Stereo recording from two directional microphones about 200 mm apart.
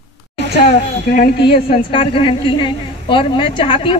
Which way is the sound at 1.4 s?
25° left (ahead or behind).